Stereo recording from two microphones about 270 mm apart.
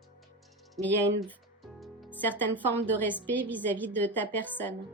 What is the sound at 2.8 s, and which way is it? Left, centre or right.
A woman's voice, centre.